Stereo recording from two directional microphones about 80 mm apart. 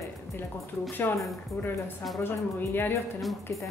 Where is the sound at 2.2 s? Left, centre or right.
Left.